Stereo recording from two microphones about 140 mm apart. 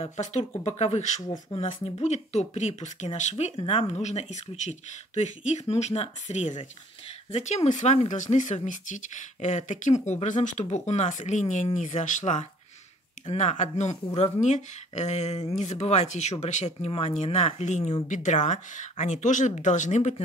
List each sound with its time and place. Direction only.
0.0 s speech: 50° left (ahead or behind)